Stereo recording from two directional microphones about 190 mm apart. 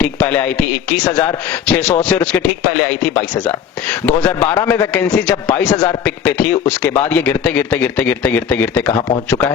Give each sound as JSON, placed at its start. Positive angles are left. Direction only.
{"t": 0.0, "sound": "a man's voice", "side_deg": 10}
{"t": 1.0, "sound": "speech", "side_deg": 20}
{"t": 1.6, "sound": "a man's voice", "side_deg": 5}